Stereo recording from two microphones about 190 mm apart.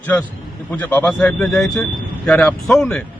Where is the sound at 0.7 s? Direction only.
10° left (ahead or behind).